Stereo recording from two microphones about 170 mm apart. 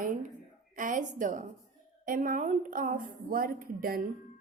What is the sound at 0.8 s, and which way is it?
A woman's voice, 50° right (ahead or behind).